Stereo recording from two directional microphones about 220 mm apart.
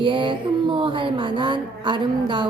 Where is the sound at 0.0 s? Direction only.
20° right (ahead or behind).